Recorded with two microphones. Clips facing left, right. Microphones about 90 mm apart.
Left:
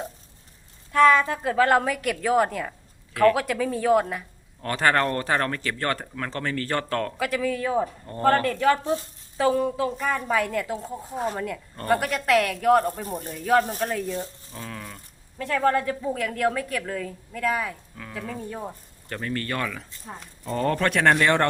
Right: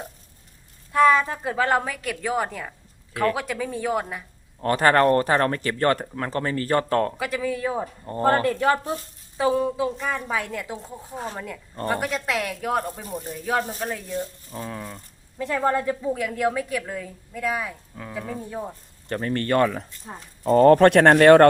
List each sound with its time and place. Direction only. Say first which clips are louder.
0.9 s a woman's voice: even; 5° right (ahead or behind)
4.6 s speech: right 4 dB; 30° right (ahead or behind)
7.2 s a woman's voice: left 1 dB; 5° right (ahead or behind)
8.0 s a woman's voice: right 3 dB; 25° right (ahead or behind); by 14.2 s 5° right (ahead or behind)
14.5 s a woman's voice: right 5 dB; 20° right (ahead or behind)
17.9 s a woman's voice: right 2 dB; 20° right (ahead or behind)
19.0 s speech: right 5 dB; 35° right (ahead or behind)